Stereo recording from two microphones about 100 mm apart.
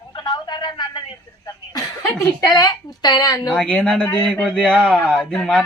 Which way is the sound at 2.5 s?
40° left (ahead or behind).